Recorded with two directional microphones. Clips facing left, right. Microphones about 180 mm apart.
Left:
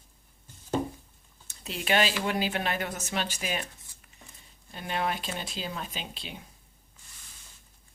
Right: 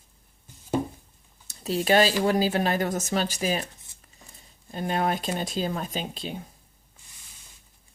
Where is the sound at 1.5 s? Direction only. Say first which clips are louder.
Right 7 dB; 40° right (ahead or behind).